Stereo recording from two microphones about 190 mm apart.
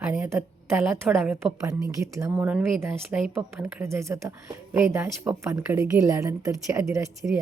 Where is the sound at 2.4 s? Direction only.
5° right (ahead or behind).